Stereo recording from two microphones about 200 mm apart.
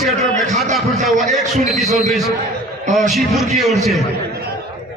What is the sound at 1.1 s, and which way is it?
Speech, 35° right (ahead or behind).